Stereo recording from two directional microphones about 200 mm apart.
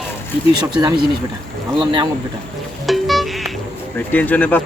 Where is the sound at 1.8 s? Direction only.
20° right (ahead or behind).